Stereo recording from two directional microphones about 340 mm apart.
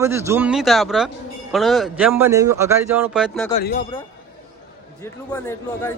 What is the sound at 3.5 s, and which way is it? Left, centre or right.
Speech, left.